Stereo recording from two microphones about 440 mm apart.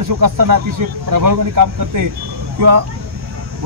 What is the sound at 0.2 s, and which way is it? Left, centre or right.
Speech, right.